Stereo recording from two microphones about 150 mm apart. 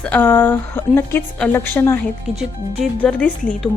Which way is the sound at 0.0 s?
15° left (ahead or behind).